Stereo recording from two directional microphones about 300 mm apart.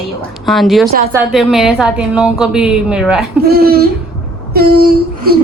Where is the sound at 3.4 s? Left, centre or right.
Right.